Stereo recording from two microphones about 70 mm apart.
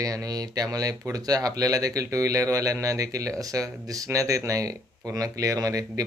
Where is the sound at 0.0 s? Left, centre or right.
Right.